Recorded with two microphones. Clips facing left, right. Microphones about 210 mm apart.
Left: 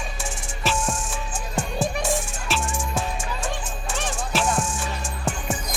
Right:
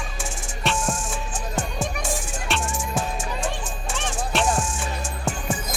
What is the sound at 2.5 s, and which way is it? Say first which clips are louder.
Music: even; centre (ahead or behind).